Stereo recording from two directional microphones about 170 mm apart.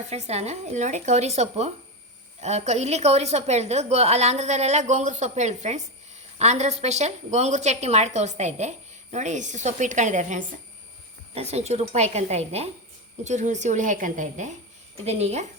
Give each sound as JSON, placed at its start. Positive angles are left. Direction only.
{"t": 0.1, "sound": "a woman's voice", "side_deg": -40}